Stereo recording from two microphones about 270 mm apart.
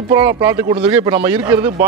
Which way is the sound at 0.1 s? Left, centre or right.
Centre.